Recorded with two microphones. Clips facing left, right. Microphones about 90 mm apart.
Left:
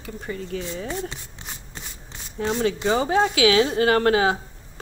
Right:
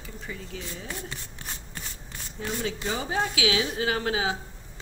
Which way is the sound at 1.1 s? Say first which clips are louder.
Left 1 dB; 20° left (ahead or behind).